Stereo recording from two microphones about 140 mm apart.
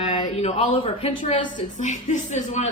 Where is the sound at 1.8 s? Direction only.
60° left (ahead or behind).